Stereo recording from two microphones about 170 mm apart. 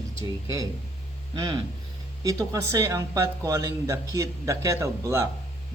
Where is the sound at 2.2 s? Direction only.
20° right (ahead or behind).